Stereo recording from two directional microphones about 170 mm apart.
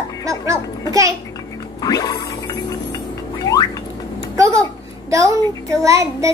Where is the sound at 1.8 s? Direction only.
20° left (ahead or behind).